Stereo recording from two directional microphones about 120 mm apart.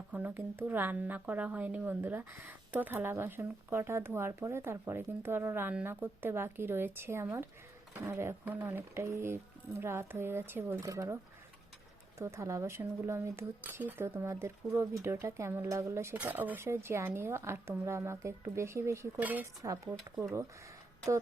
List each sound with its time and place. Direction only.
0.1 s a woman's voice: 15° right (ahead or behind)
12.2 s a woman's voice: 25° right (ahead or behind)
19.6 s a woman's voice: 25° right (ahead or behind)
20.0 s speech: 5° right (ahead or behind)